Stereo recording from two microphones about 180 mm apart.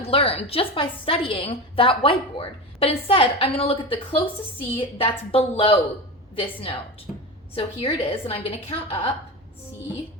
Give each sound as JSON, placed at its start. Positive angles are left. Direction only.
{"t": 0.0, "sound": "a woman's voice", "side_deg": 30}